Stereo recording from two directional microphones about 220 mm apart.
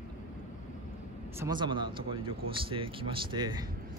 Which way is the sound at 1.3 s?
20° right (ahead or behind).